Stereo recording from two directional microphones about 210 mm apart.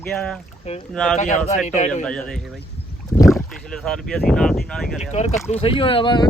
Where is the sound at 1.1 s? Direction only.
35° left (ahead or behind).